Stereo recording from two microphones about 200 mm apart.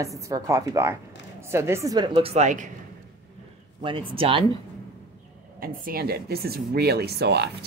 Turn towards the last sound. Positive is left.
turn(degrees=-55)  # may be behind; listen again after turning